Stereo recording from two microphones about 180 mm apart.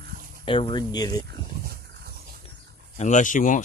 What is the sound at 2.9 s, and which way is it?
Speech, 40° left (ahead or behind).